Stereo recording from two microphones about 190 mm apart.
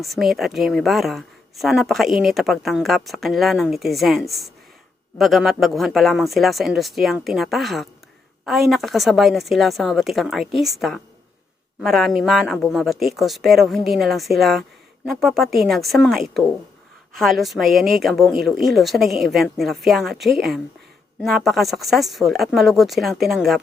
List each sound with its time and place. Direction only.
0.0 s speech: centre (ahead or behind)